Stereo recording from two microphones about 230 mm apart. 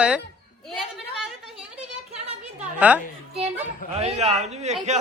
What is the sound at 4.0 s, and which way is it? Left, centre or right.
Speech, right.